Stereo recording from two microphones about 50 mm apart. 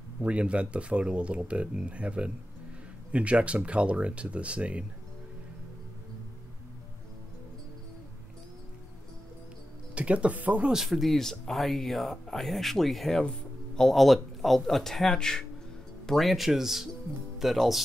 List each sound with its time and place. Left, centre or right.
0.2 s speech: right
9.9 s speech: right
10.7 s speech: centre